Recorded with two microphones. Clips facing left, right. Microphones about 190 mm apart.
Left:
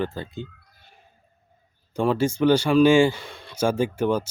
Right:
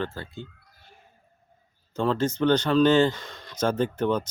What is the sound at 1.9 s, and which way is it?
Speech, 10° left (ahead or behind).